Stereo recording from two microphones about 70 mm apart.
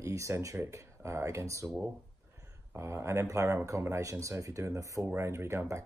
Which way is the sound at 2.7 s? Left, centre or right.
Right.